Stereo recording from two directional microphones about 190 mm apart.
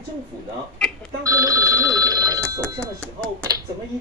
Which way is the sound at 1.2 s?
15° right (ahead or behind).